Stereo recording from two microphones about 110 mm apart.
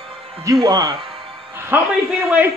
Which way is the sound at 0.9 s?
55° right (ahead or behind).